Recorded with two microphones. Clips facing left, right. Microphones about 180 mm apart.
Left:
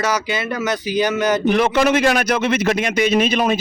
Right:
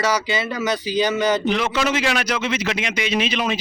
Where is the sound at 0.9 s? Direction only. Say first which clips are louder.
Left 2 dB; 15° left (ahead or behind).